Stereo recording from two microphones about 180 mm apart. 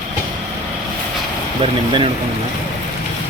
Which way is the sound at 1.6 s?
30° right (ahead or behind).